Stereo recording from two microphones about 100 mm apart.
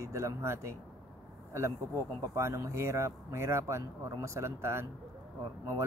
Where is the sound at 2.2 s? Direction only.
30° right (ahead or behind).